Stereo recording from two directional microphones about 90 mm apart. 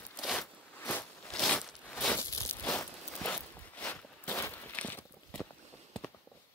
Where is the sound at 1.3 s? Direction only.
10° left (ahead or behind).